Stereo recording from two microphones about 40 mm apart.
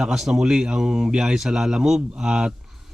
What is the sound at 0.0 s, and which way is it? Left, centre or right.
Speech, centre.